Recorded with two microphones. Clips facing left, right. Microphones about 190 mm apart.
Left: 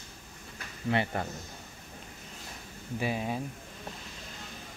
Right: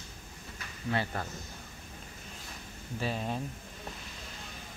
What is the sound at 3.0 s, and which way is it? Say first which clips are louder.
Speech: left 2 dB; 10° left (ahead or behind).